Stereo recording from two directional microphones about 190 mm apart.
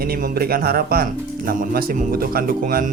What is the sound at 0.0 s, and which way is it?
Speech, 50° right (ahead or behind).